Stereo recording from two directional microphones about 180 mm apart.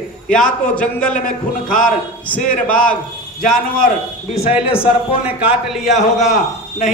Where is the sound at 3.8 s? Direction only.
35° left (ahead or behind).